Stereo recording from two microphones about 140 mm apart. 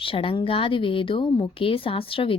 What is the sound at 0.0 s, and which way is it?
Speech, 40° left (ahead or behind).